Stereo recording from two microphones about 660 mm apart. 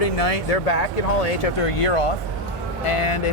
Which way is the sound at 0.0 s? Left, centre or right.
Left.